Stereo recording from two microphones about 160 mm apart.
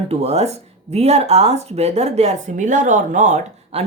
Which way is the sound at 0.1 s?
40° right (ahead or behind).